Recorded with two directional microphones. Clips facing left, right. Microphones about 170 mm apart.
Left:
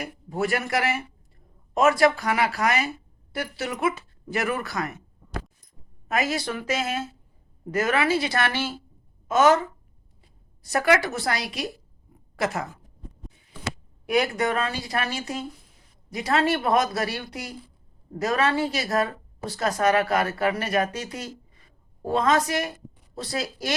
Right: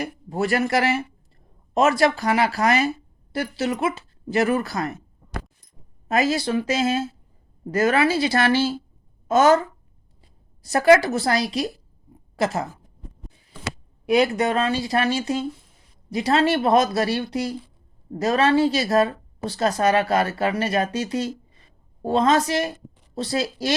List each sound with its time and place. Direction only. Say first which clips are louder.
0.0 s speech: right 2 dB; 30° right (ahead or behind)
6.1 s speech: right 5 dB; 30° right (ahead or behind)
14.1 s speech: right 4 dB; 25° right (ahead or behind)